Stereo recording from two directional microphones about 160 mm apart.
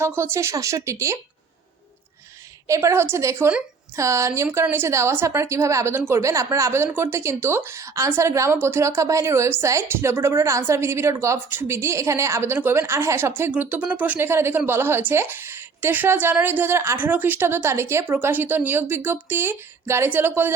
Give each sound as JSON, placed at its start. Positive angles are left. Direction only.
{"t": 0.0, "sound": "a woman's voice", "side_deg": -15}
{"t": 2.6, "sound": "a woman's voice", "side_deg": -20}